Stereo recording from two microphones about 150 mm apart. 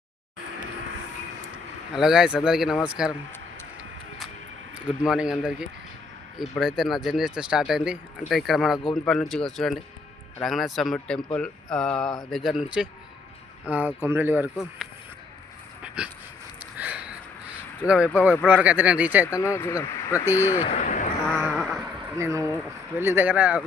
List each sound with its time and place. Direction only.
1.9 s speech: 5° right (ahead or behind)
5.0 s speech: 5° right (ahead or behind)
16.7 s a sound: 10° right (ahead or behind)
17.8 s speech: 5° right (ahead or behind)
19.4 s speech: 15° left (ahead or behind)
20.6 s speech: 50° left (ahead or behind)
21.2 s a sound: 5° left (ahead or behind)
22.1 s speech: 20° right (ahead or behind)